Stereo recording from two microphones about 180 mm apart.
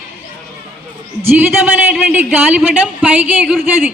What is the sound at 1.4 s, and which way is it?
A woman's voice, 10° right (ahead or behind).